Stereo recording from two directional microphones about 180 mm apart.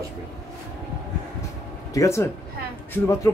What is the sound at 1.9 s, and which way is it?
Speech, 15° left (ahead or behind).